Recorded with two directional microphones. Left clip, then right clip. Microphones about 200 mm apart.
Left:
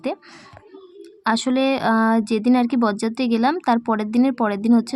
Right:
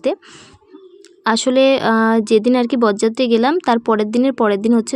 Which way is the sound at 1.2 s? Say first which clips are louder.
Right 7 dB; 20° right (ahead or behind).